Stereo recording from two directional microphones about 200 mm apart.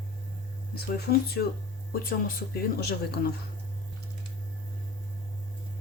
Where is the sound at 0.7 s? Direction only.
50° left (ahead or behind).